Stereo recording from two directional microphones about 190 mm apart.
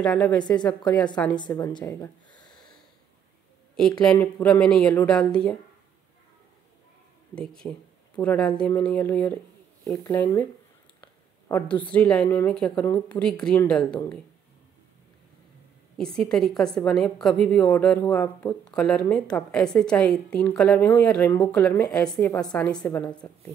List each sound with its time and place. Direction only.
0.0 s a woman's voice: centre (ahead or behind)
0.4 s a woman's voice: 20° left (ahead or behind)
2.4 s a sound: 5° left (ahead or behind)
4.0 s a woman's voice: 5° left (ahead or behind)
7.3 s a woman's voice: 5° left (ahead or behind)
9.8 s speech: 15° left (ahead or behind)
11.0 s a sound: 15° left (ahead or behind)
11.6 s a woman's voice: 5° left (ahead or behind)
16.0 s a woman's voice: 5° left (ahead or behind)